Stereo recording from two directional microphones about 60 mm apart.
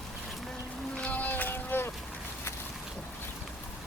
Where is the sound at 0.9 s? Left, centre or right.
Left.